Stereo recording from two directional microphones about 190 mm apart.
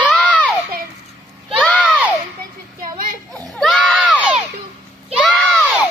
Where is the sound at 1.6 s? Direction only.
5° left (ahead or behind).